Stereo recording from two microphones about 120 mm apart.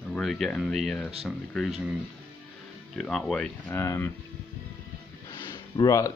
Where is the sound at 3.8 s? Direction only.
20° left (ahead or behind).